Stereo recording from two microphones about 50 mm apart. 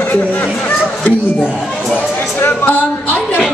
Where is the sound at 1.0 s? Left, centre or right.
Left.